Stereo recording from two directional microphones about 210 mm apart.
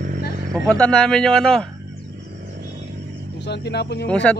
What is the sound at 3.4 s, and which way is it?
Speech, 55° left (ahead or behind).